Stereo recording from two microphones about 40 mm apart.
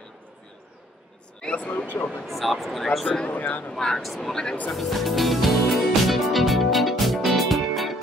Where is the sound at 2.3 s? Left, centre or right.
Centre.